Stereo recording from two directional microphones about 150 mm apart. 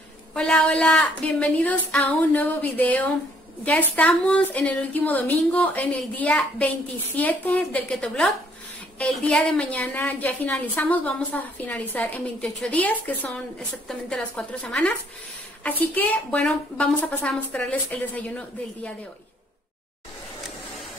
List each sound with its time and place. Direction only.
0.3 s a woman's voice: 5° left (ahead or behind)